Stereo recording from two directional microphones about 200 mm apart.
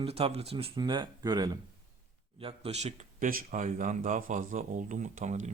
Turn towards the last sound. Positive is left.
turn(degrees=-35)  # may be behind; listen again after turning